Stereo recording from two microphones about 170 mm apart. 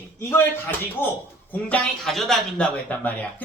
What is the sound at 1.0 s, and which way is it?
Speech, 15° left (ahead or behind).